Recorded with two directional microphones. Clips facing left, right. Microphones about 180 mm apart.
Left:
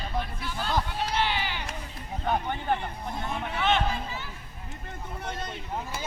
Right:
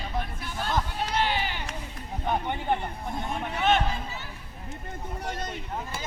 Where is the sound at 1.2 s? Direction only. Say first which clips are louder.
Right 2 dB; 45° right (ahead or behind).